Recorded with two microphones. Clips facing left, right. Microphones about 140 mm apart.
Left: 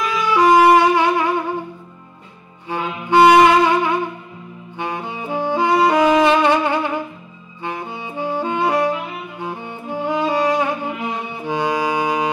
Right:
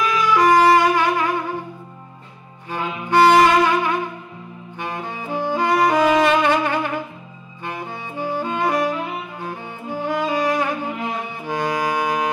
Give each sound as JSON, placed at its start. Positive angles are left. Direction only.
{"t": 0.3, "sound": "music", "side_deg": 15}
{"t": 2.7, "sound": "music", "side_deg": 15}
{"t": 4.7, "sound": "saxophone", "side_deg": 15}
{"t": 9.4, "sound": "music", "side_deg": 15}